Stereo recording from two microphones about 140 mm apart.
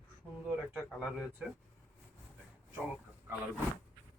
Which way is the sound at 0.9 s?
5° right (ahead or behind).